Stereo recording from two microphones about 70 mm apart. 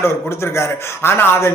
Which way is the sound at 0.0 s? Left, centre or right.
Left.